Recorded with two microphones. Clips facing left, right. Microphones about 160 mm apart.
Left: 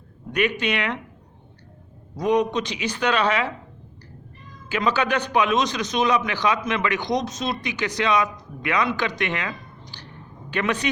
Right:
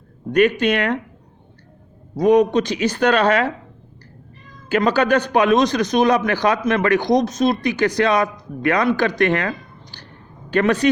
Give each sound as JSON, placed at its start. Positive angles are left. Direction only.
{"t": 0.6, "sound": "a man's voice", "side_deg": -50}
{"t": 2.2, "sound": "a man's voice", "side_deg": -50}
{"t": 4.7, "sound": "a man's voice", "side_deg": -50}